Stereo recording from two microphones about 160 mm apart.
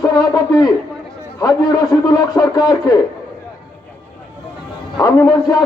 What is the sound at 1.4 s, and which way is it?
A man's voice, 25° left (ahead or behind).